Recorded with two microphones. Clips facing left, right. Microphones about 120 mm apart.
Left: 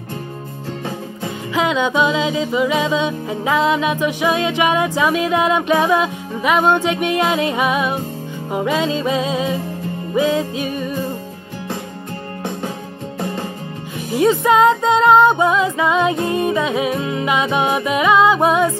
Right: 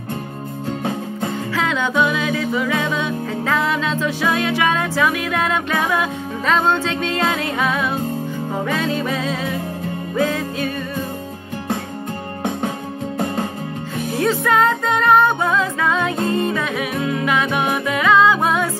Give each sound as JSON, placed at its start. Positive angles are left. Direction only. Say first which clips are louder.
{"t": 1.5, "sound": "music", "louder": "left 5 dB", "side_deg": 15}
{"t": 14.1, "sound": "music", "louder": "left 4 dB", "side_deg": 15}